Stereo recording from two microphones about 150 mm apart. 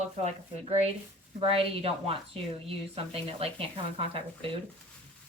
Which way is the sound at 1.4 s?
40° right (ahead or behind).